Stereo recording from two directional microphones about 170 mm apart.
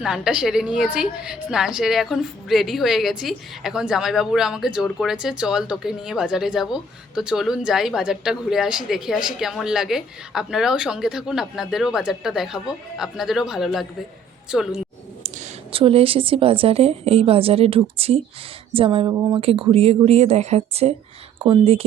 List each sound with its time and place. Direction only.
0.0 s a woman's voice: 5° right (ahead or behind)
15.7 s a woman's voice: 35° right (ahead or behind)
19.4 s a woman's voice: 35° right (ahead or behind)